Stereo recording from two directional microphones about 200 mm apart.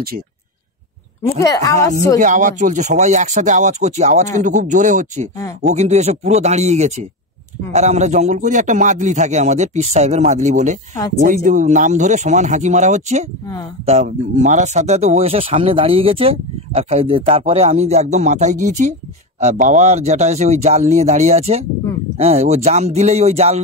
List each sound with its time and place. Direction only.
1.2 s a woman's voice: 15° left (ahead or behind)
2.1 s speech: 40° right (ahead or behind)